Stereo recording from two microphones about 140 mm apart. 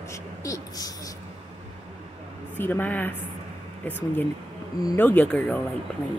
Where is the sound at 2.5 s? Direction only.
15° left (ahead or behind).